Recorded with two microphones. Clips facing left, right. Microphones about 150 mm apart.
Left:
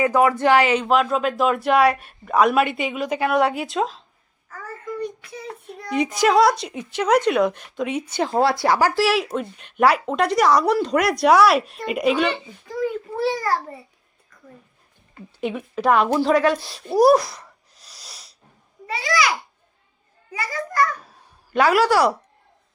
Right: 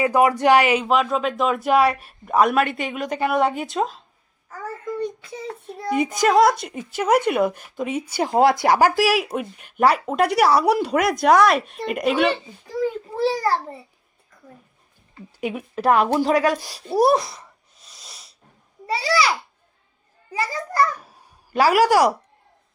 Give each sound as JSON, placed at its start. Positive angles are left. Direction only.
{"t": 0.1, "sound": "speech", "side_deg": -15}
{"t": 0.9, "sound": "speech", "side_deg": 0}
{"t": 4.4, "sound": "child singing", "side_deg": -25}
{"t": 5.9, "sound": "speech", "side_deg": -5}
{"t": 8.1, "sound": "speech", "side_deg": -15}
{"t": 12.6, "sound": "a child's voice", "side_deg": -35}
{"t": 15.4, "sound": "a woman's voice", "side_deg": -5}
{"t": 16.6, "sound": "speech", "side_deg": -40}
{"t": 16.9, "sound": "a sound", "side_deg": 0}
{"t": 18.9, "sound": "a child's voice", "side_deg": -35}
{"t": 20.3, "sound": "a child's voice", "side_deg": -30}
{"t": 21.0, "sound": "a sound", "side_deg": -10}